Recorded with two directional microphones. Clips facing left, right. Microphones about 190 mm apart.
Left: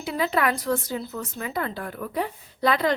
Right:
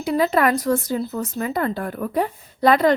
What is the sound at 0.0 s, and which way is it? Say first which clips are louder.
Speech: right 6 dB; 45° right (ahead or behind).